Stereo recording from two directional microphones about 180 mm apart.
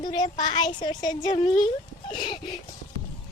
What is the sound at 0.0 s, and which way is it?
A woman's voice, 25° left (ahead or behind).